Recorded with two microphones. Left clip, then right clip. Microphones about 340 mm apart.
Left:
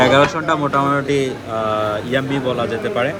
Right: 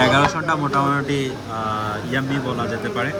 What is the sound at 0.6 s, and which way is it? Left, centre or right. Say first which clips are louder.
Speech: left 2 dB; left.